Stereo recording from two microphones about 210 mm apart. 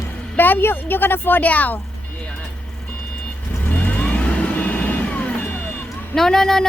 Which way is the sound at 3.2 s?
5° left (ahead or behind).